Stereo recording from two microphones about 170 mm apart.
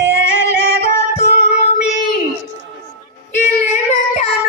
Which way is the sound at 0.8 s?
40° left (ahead or behind).